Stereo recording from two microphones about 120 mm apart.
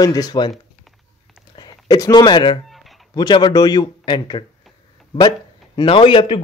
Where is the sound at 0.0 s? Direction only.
30° left (ahead or behind).